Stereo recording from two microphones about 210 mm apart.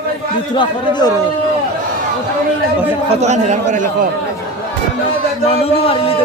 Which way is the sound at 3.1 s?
30° right (ahead or behind).